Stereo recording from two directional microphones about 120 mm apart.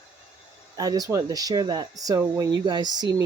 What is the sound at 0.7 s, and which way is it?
Speech, 30° right (ahead or behind).